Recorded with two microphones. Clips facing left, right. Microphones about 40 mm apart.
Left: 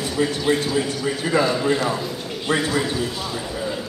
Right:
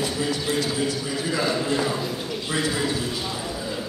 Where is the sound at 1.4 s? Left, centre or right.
Centre.